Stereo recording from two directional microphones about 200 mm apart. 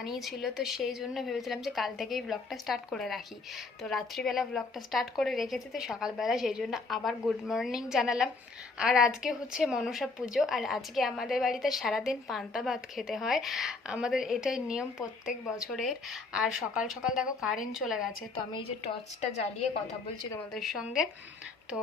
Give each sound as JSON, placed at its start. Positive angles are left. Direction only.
{"t": 0.0, "sound": "a woman's voice", "side_deg": 0}
{"t": 18.5, "sound": "a woman's voice", "side_deg": 30}
{"t": 20.5, "sound": "a woman's voice", "side_deg": 0}